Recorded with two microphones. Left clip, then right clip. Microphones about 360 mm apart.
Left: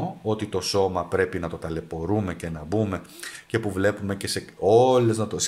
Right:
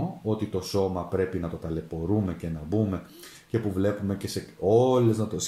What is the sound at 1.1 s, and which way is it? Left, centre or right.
Speech, left.